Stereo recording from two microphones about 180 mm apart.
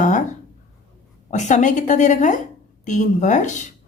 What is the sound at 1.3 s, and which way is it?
A woman's voice, 40° left (ahead or behind).